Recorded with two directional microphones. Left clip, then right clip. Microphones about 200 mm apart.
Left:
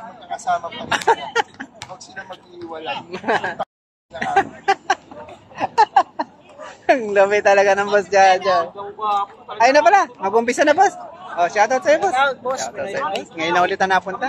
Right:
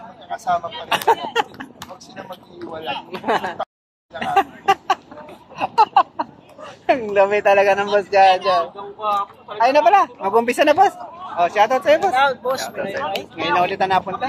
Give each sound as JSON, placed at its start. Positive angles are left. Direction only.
{"t": 0.3, "sound": "speech", "side_deg": -10}
{"t": 0.8, "sound": "a man's voice", "side_deg": 10}
{"t": 1.3, "sound": "a sound", "side_deg": 10}
{"t": 3.2, "sound": "speech", "side_deg": 5}
{"t": 4.2, "sound": "a sound", "side_deg": 10}
{"t": 5.6, "sound": "a sound", "side_deg": 20}
{"t": 6.9, "sound": "a man's voice", "side_deg": 20}
{"t": 9.0, "sound": "speech", "side_deg": -25}
{"t": 9.6, "sound": "a man's voice", "side_deg": 20}
{"t": 12.0, "sound": "speech", "side_deg": -10}
{"t": 13.4, "sound": "a man's voice", "side_deg": 15}